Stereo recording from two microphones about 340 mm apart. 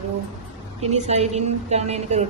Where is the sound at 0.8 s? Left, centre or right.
Centre.